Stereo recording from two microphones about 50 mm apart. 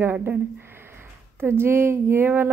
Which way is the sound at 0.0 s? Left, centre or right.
Right.